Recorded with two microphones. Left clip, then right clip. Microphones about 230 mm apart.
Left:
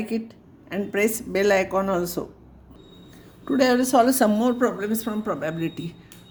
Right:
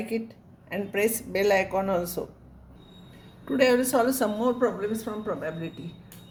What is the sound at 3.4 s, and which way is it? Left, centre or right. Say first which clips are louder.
Speech: left 2 dB; centre.